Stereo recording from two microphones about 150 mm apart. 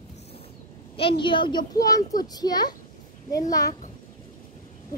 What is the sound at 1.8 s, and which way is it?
A child's voice, 25° left (ahead or behind).